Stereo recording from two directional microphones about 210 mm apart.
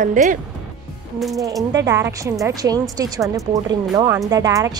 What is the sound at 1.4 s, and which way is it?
Speech, 15° right (ahead or behind).